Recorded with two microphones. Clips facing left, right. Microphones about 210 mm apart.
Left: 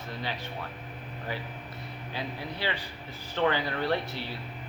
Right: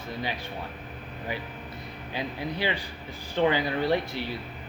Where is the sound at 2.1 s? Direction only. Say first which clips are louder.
Right 4 dB; 15° right (ahead or behind).